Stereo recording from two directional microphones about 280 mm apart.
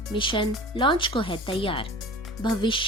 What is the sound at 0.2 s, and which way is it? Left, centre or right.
Speech, centre.